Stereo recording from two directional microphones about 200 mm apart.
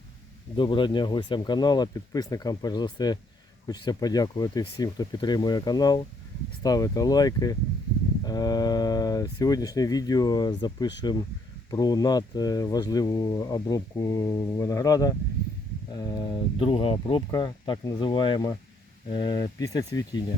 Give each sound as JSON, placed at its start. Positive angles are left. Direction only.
{"t": 0.5, "sound": "speech", "side_deg": 25}